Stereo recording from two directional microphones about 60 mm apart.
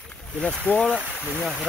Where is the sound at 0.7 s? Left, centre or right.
Left.